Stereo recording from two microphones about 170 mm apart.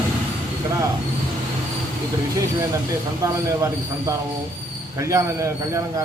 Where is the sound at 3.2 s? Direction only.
20° right (ahead or behind).